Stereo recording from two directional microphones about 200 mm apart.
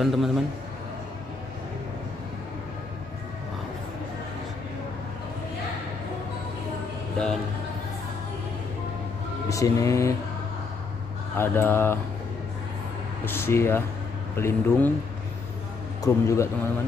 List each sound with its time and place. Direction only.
0.0 s a man's voice: centre (ahead or behind)
9.5 s a man's voice: 15° left (ahead or behind)
11.3 s a man's voice: 10° left (ahead or behind)
13.2 s a man's voice: 10° left (ahead or behind)
16.0 s a man's voice: 15° left (ahead or behind)